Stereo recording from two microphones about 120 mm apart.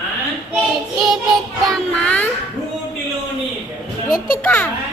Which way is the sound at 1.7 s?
10° left (ahead or behind).